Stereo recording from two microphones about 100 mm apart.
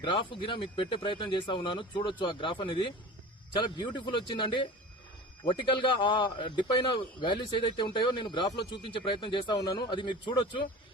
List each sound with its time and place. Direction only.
0.0 s speech: 55° left (ahead or behind)